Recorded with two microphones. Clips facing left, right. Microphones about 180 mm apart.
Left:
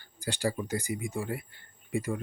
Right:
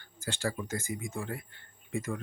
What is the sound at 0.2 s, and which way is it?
Speech, 15° left (ahead or behind).